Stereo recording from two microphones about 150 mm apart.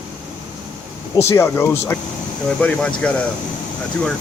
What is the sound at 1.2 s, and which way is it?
Speech, 15° left (ahead or behind).